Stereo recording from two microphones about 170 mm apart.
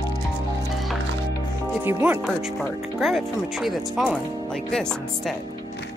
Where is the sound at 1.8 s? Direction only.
10° right (ahead or behind).